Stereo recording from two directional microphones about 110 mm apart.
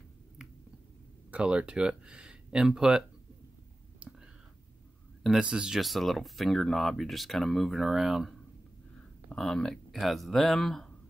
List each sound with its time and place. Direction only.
1.3 s speech: 10° right (ahead or behind)
5.2 s speech: 5° right (ahead or behind)